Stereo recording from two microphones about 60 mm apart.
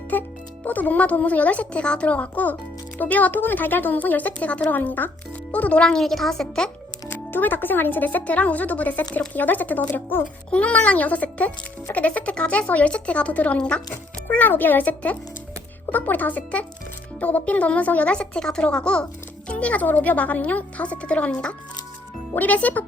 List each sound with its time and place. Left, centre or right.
0.1 s speech: left
6.0 s a woman's voice: centre
7.1 s speech: left
10.5 s speech: left
14.3 s speech: left